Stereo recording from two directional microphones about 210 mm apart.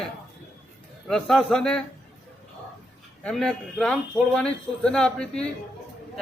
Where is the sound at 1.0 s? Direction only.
5° left (ahead or behind).